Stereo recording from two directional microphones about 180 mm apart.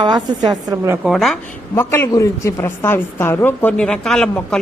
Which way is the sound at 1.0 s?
Centre (ahead or behind).